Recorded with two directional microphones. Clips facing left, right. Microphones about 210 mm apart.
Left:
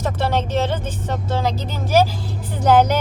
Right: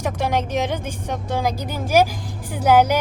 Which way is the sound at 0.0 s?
15° right (ahead or behind).